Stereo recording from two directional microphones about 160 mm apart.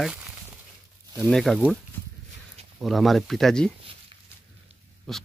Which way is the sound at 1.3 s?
Centre (ahead or behind).